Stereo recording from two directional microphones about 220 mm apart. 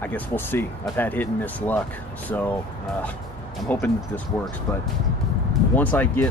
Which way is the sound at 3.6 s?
5° left (ahead or behind).